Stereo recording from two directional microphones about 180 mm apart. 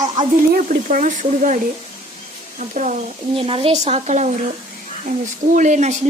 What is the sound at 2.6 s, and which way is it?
Speech, 45° right (ahead or behind).